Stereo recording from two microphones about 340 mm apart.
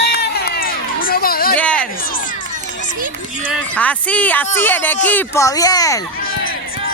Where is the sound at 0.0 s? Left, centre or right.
Left.